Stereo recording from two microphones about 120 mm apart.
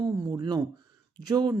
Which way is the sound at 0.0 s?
30° right (ahead or behind).